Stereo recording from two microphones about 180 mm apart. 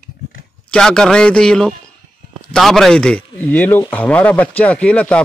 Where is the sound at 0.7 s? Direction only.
5° left (ahead or behind).